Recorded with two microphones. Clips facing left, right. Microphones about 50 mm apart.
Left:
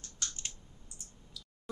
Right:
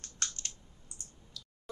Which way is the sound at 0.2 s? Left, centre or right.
Right.